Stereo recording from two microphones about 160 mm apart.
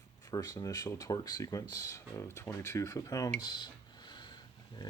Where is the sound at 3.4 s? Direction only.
25° left (ahead or behind).